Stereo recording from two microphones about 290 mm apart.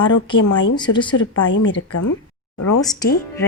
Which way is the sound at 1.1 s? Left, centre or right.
Left.